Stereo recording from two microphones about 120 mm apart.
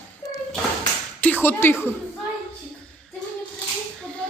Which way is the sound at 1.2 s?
15° left (ahead or behind).